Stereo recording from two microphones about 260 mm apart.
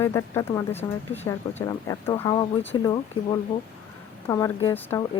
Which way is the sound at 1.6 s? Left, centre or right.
Centre.